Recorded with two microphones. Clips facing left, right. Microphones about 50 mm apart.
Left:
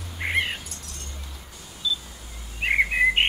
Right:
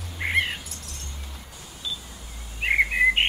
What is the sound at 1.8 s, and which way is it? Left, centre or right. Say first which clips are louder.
Camera: left 6 dB; right.